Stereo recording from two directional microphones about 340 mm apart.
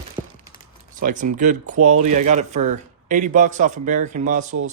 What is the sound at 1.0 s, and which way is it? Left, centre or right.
A man's voice, right.